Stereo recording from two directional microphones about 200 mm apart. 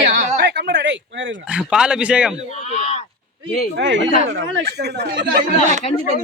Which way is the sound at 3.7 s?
65° right (ahead or behind).